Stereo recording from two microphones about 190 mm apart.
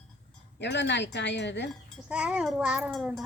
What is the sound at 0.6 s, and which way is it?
Speech, 65° left (ahead or behind).